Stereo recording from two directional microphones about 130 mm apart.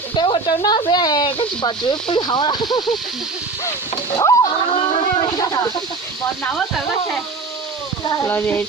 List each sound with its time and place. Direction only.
0.2 s speech: 35° left (ahead or behind)
4.2 s splash: 30° left (ahead or behind)
4.7 s a sound: 40° left (ahead or behind)
8.2 s speech: 15° left (ahead or behind)